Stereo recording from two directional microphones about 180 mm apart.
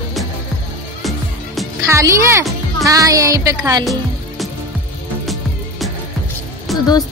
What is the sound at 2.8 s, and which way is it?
Music, 20° right (ahead or behind).